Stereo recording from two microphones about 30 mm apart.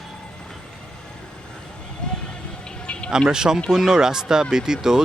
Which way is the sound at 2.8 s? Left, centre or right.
Left.